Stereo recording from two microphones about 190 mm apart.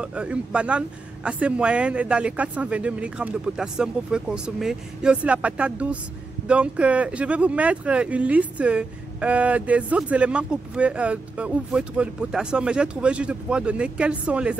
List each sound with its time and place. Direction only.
0.0 s speech: 5° right (ahead or behind)